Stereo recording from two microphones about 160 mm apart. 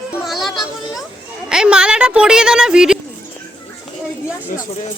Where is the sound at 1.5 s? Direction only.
5° right (ahead or behind).